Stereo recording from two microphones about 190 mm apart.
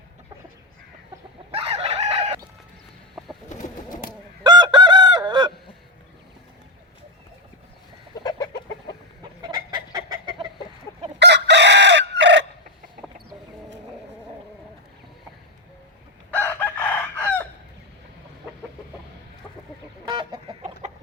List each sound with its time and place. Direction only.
1.5 s chicken: 30° right (ahead or behind)
3.2 s bird: centre (ahead or behind)
3.5 s bird: 40° left (ahead or behind)
4.4 s chicken: 25° right (ahead or behind)
8.1 s chicken: 20° left (ahead or behind)
9.4 s chicken: 25° right (ahead or behind)
11.2 s chicken: 65° right (ahead or behind)
16.3 s chicken: 10° left (ahead or behind)
20.1 s chicken: 25° right (ahead or behind)
20.8 s chicken: 35° right (ahead or behind)